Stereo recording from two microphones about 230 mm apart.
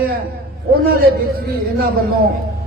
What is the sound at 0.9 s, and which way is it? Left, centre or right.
A man's voice, right.